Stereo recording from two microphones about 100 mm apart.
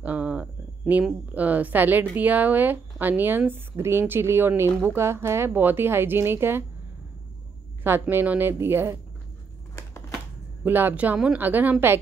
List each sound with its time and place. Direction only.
0.0 s a sound: 15° right (ahead or behind)
1.3 s speech: 15° right (ahead or behind)
7.8 s speech: 20° right (ahead or behind)
9.8 s typewriter: 30° left (ahead or behind)
10.6 s speech: 20° right (ahead or behind)